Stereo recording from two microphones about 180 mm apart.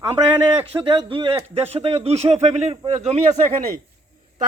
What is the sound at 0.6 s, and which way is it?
A man's voice, 30° right (ahead or behind).